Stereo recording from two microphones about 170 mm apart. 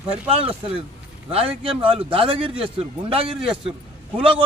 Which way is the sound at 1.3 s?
35° right (ahead or behind).